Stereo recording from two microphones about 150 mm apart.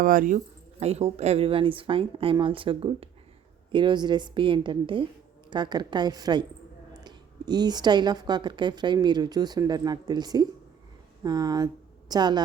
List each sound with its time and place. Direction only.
0.0 s a woman's voice: 65° right (ahead or behind); by 12.4 s 30° right (ahead or behind)